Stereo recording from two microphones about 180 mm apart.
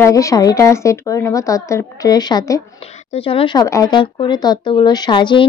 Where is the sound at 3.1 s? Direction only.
30° left (ahead or behind).